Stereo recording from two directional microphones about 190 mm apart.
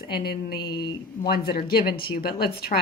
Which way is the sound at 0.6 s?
25° left (ahead or behind).